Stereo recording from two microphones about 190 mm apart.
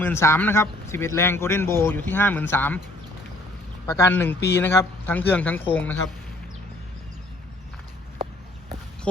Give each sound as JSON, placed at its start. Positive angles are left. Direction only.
{"t": 0.0, "sound": "speech", "side_deg": 15}
{"t": 3.8, "sound": "speech", "side_deg": 15}